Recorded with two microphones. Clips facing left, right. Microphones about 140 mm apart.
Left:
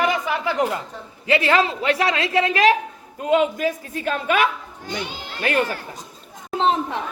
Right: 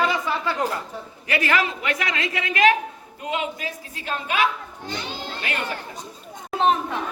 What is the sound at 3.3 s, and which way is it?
A man's voice, 50° left (ahead or behind).